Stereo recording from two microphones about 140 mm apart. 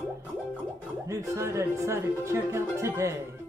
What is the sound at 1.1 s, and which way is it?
Speech, 20° right (ahead or behind).